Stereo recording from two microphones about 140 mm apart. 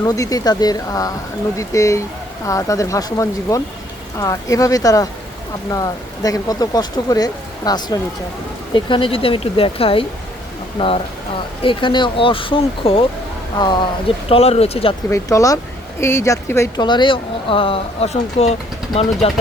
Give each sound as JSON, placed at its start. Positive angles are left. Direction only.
{"t": 0.0, "sound": "speech", "side_deg": 25}
{"t": 14.3, "sound": "speech", "side_deg": 45}
{"t": 15.1, "sound": "speech", "side_deg": 25}
{"t": 16.8, "sound": "speech", "side_deg": 35}